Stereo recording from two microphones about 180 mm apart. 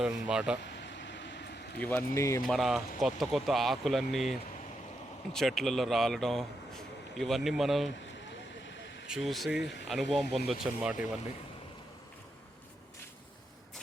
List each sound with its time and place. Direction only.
0.0 s speech: 5° right (ahead or behind)
0.6 s a sound: 75° left (ahead or behind)
1.8 s speech: 10° left (ahead or behind)
2.4 s speech: centre (ahead or behind)
9.0 s speech: centre (ahead or behind)